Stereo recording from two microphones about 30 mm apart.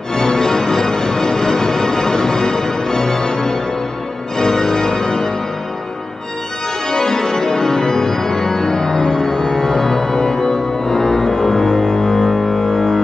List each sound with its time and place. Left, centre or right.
0.1 s music: left
4.4 s organ: left
6.9 s organ: centre
12.3 s music: centre